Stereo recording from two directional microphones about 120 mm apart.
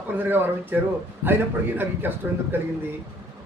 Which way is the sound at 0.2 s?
15° right (ahead or behind).